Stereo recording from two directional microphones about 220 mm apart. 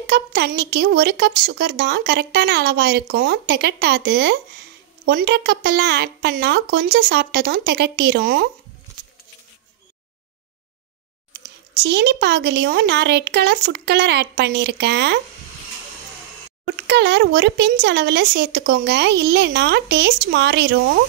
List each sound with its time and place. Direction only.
0.0 s a woman's voice: 50° right (ahead or behind)
11.8 s a woman's voice: 50° right (ahead or behind)
16.8 s a woman's voice: 50° right (ahead or behind)